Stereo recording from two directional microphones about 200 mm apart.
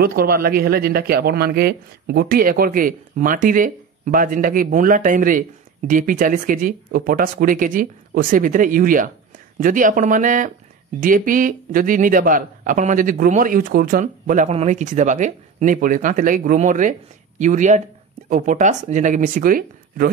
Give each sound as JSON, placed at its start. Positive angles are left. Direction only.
{"t": 0.0, "sound": "a man's voice", "side_deg": -50}